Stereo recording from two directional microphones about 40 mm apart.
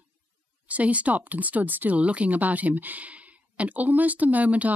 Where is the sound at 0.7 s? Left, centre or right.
Right.